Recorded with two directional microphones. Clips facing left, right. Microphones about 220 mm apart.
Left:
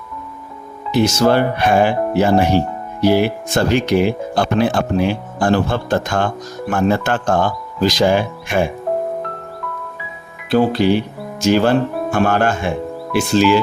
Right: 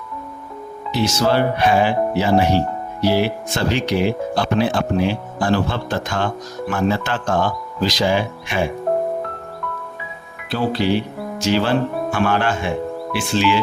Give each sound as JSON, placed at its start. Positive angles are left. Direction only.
{"t": 0.9, "sound": "speech", "side_deg": 50}
{"t": 10.5, "sound": "speech", "side_deg": 50}